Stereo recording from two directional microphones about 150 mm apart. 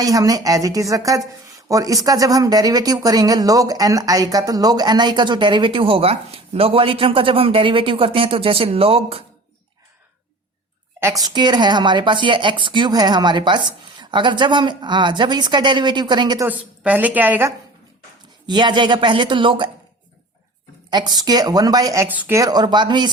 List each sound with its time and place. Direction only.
0.0 s speech: 25° right (ahead or behind); by 9.2 s 40° right (ahead or behind)
11.0 s speech: 25° right (ahead or behind)
16.5 s a woman's voice: 10° right (ahead or behind)
18.4 s speech: 30° right (ahead or behind)
20.9 s speech: 30° right (ahead or behind); by 22.4 s 15° right (ahead or behind)
22.4 s speech: 25° right (ahead or behind)